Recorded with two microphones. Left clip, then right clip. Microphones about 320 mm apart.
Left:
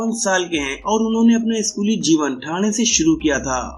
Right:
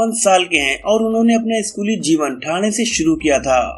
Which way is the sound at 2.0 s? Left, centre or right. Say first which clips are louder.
Right 1 dB; centre.